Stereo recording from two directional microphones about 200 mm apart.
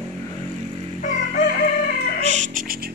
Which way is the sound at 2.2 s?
35° right (ahead or behind).